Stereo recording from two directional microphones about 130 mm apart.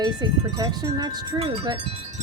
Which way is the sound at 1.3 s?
45° right (ahead or behind).